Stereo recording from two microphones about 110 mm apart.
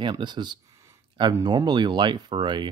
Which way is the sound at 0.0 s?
40° right (ahead or behind).